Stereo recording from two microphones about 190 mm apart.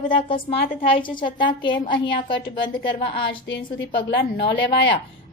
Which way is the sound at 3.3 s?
75° left (ahead or behind).